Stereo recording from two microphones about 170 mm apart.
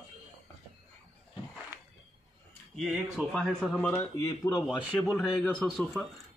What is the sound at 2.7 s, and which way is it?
Speech, centre (ahead or behind).